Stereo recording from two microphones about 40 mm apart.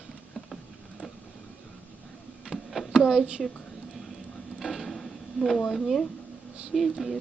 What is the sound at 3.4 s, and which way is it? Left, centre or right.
Speech, centre.